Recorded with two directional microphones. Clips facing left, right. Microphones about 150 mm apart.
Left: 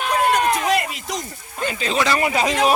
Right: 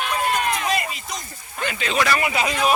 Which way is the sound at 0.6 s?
70° left (ahead or behind).